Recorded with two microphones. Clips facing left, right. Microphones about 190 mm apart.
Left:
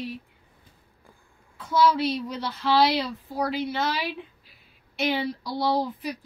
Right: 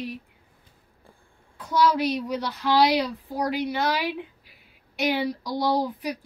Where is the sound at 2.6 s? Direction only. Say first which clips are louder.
Right 1 dB; 15° right (ahead or behind).